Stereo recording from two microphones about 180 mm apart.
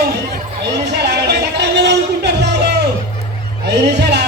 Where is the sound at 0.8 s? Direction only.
70° right (ahead or behind).